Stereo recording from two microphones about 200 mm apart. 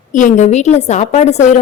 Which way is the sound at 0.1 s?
40° left (ahead or behind).